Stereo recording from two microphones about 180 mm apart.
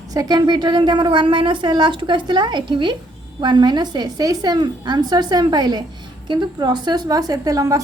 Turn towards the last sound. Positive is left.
turn(degrees=-20)  # may be behind; listen again after turning